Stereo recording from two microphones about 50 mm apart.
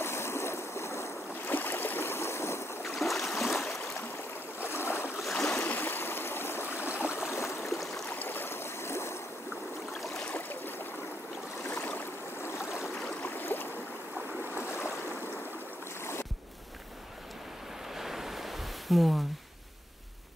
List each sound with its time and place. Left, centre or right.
0.0 s stream: left
1.5 s boat: left
3.0 s stream: centre
4.6 s stream: left
5.3 s stream: centre
5.6 s stream: left
7.6 s stream: centre
8.2 s boat: left
10.5 s stream: left
11.6 s a sound: left
13.2 s boat: left
14.6 s boat: left
17.9 s a sound: centre